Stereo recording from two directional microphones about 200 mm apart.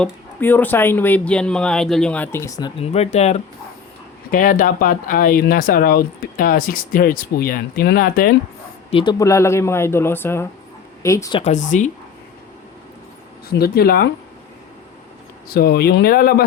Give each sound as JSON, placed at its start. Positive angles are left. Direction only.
{"t": 0.0, "sound": "speech", "side_deg": 10}
{"t": 8.9, "sound": "speech", "side_deg": 25}
{"t": 11.3, "sound": "speech", "side_deg": 35}
{"t": 13.5, "sound": "speech", "side_deg": 50}
{"t": 15.4, "sound": "speech", "side_deg": 50}